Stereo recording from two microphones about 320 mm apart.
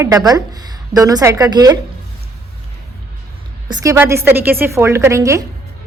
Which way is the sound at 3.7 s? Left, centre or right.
Centre.